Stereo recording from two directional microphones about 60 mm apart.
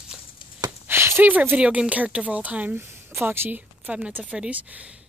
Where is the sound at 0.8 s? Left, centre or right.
Right.